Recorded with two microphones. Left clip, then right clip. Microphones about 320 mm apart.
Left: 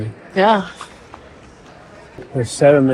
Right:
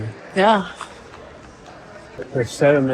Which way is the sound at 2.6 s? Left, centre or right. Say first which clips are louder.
Left 4 dB; left.